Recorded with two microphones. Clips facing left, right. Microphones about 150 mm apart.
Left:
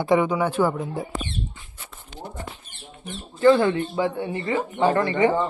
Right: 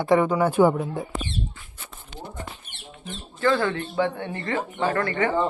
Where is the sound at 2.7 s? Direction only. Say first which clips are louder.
Right 1 dB; 70° right (ahead or behind).